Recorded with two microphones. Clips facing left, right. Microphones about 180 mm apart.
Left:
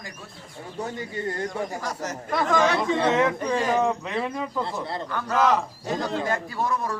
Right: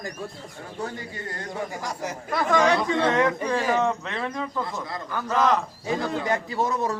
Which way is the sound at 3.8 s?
10° left (ahead or behind).